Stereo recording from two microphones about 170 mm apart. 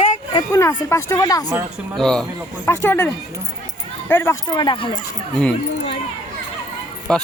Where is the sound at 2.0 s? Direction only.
5° left (ahead or behind).